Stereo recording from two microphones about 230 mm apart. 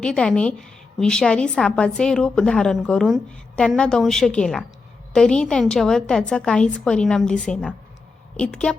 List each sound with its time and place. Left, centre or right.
0.0 s a woman's voice: centre